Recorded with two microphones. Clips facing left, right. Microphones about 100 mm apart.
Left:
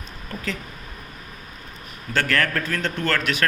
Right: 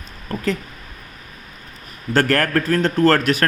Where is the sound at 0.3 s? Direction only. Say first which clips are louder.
Right 7 dB; 40° right (ahead or behind).